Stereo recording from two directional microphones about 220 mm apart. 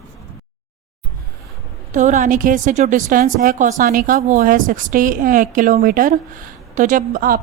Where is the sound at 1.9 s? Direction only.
35° right (ahead or behind).